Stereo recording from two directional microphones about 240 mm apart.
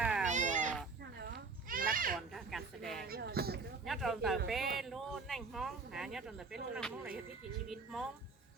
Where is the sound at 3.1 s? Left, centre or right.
Right.